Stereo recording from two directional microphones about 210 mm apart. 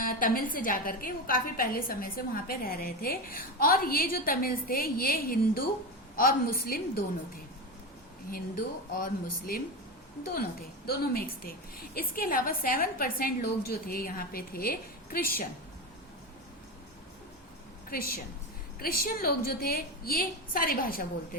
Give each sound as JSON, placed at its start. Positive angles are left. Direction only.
{"t": 0.0, "sound": "a woman's voice", "side_deg": 40}
{"t": 8.3, "sound": "speech", "side_deg": 40}
{"t": 10.8, "sound": "a woman's voice", "side_deg": 45}
{"t": 17.9, "sound": "a woman's voice", "side_deg": 45}